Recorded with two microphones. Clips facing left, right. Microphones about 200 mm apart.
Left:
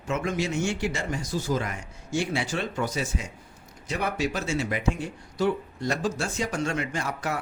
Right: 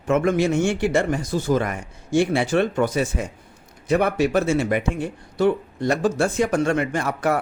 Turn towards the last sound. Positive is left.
turn(degrees=-55)  # may be behind; listen again after turning